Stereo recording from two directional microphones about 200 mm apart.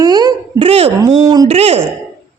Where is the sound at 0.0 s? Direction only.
20° right (ahead or behind).